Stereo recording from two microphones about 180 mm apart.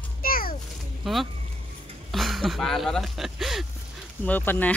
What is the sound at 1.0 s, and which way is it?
Speech, centre (ahead or behind).